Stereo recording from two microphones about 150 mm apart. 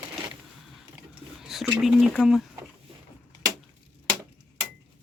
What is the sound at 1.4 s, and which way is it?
Speech, 5° right (ahead or behind).